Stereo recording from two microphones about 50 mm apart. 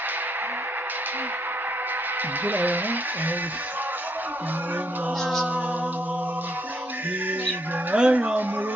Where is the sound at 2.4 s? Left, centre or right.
Right.